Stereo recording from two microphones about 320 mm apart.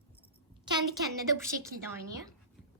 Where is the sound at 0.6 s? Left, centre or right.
Centre.